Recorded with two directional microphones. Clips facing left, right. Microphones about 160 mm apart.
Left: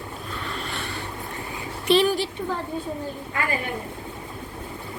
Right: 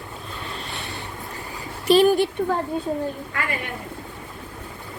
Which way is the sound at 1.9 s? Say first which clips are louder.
Right 4 dB; 45° right (ahead or behind).